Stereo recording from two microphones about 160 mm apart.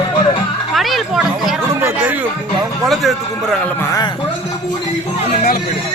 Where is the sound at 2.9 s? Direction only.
Centre (ahead or behind).